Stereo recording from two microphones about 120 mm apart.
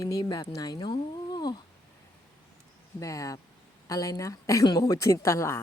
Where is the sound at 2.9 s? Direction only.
30° left (ahead or behind).